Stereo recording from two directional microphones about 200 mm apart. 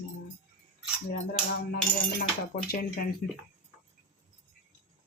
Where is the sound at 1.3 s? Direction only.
50° left (ahead or behind).